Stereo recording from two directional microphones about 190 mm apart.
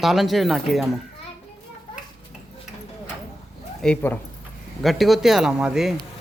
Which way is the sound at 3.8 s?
5° left (ahead or behind).